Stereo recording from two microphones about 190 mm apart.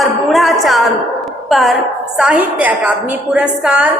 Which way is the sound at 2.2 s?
5° right (ahead or behind).